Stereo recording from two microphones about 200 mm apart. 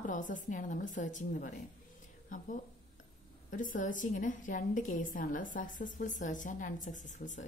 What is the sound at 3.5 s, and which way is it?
A woman's voice, 40° left (ahead or behind).